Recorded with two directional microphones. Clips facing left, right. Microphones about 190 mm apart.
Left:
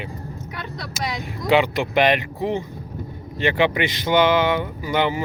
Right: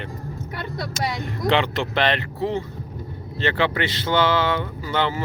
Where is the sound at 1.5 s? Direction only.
10° left (ahead or behind).